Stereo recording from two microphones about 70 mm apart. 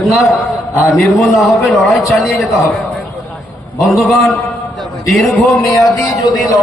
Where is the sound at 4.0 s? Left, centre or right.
Centre.